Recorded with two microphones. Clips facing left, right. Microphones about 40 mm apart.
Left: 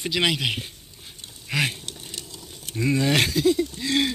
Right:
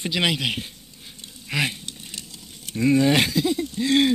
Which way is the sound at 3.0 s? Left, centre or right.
Centre.